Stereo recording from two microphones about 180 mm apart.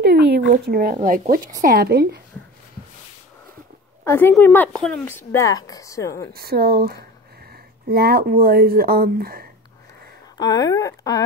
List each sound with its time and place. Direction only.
0.0 s a sound: 65° right (ahead or behind)
0.9 s speech: 45° right (ahead or behind); by 2.2 s 60° right (ahead or behind)
4.0 s a woman's voice: 15° left (ahead or behind)
5.0 s a woman's voice: 15° left (ahead or behind)
6.3 s speech: 60° right (ahead or behind)
10.3 s speech: 20° left (ahead or behind)